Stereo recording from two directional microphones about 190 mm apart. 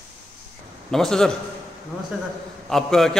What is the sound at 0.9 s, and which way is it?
Speech, centre (ahead or behind).